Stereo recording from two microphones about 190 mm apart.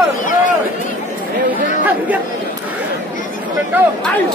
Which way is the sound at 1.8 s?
10° right (ahead or behind).